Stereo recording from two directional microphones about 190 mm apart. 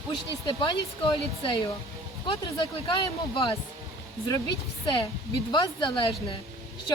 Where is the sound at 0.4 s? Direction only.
25° left (ahead or behind).